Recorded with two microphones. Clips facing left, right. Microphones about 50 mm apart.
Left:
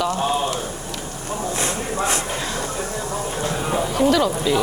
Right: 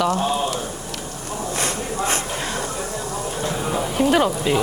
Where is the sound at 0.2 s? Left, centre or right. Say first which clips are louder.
Even; centre.